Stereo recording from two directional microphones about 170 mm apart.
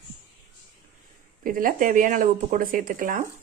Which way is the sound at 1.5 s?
55° right (ahead or behind).